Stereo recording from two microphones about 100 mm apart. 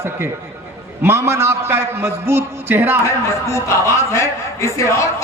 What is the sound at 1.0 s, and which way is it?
A man's voice, 25° right (ahead or behind).